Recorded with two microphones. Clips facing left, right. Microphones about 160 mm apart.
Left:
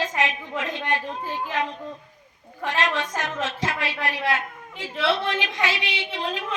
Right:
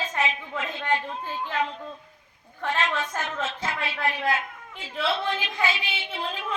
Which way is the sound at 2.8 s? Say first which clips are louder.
Left 4 dB; 90° left.